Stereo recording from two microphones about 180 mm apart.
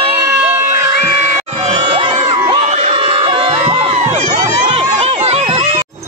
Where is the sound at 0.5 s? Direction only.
15° right (ahead or behind).